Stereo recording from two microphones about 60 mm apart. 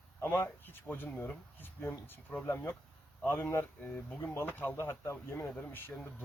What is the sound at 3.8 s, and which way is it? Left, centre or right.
Speech, left.